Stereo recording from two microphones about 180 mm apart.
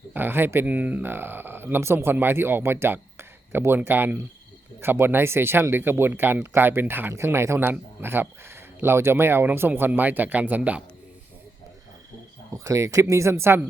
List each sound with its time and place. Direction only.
0.1 s speech: 10° right (ahead or behind)
12.5 s speech: 15° right (ahead or behind)